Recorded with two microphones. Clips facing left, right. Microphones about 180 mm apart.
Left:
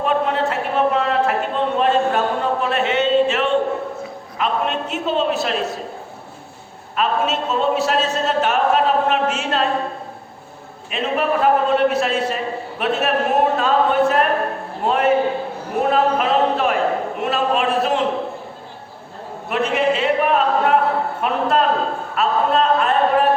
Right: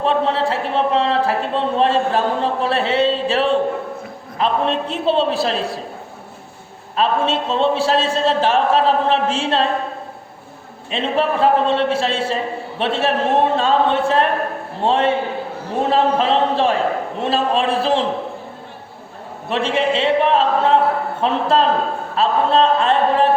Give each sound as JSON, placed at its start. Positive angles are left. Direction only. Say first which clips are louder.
{"t": 0.0, "sound": "a sound", "louder": "right 1 dB", "side_deg": -30}
{"t": 4.4, "sound": "a man's voice", "louder": "right 3 dB", "side_deg": -30}
{"t": 6.9, "sound": "a man's voice", "louder": "right 2 dB", "side_deg": -30}
{"t": 10.9, "sound": "a man's voice", "louder": "right 1 dB", "side_deg": -30}
{"t": 19.5, "sound": "a man's voice", "louder": "even", "side_deg": -30}